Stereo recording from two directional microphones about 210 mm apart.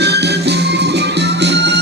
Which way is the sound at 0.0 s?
50° right (ahead or behind).